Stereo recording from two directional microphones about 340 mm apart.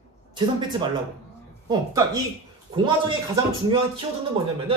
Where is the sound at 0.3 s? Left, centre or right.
Centre.